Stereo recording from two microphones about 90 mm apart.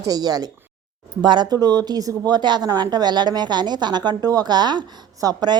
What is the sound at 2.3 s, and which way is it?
A woman's voice, 55° right (ahead or behind).